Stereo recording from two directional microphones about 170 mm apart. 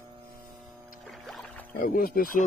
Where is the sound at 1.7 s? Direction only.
55° left (ahead or behind).